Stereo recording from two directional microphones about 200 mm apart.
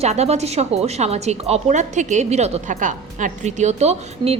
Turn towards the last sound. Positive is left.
turn(degrees=-35)  # may be behind; listen again after turning